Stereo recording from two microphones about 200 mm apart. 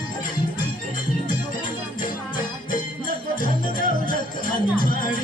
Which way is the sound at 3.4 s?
40° left (ahead or behind).